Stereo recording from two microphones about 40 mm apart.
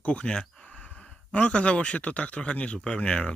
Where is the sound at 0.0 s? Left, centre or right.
Left.